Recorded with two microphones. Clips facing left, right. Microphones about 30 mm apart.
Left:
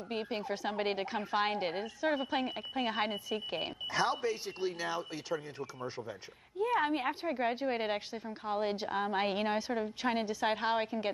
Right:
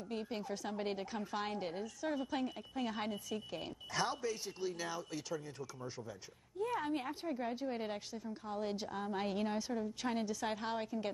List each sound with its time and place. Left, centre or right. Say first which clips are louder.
0.1 s a woman's voice: left 5 dB; left
3.9 s a woman's voice: left 5 dB; left
7.1 s a woman's voice: left 7 dB; left